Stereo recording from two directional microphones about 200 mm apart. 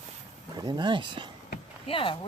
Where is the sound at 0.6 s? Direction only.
20° right (ahead or behind).